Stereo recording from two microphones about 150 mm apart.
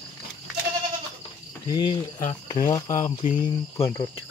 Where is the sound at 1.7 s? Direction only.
30° left (ahead or behind).